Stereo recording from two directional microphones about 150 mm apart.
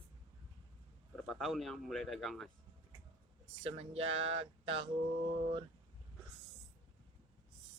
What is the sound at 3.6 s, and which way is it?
Speech, 40° right (ahead or behind).